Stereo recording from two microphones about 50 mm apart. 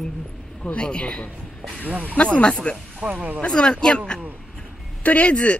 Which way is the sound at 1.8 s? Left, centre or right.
Right.